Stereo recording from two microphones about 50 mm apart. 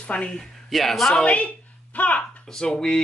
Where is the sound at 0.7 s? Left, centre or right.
Centre.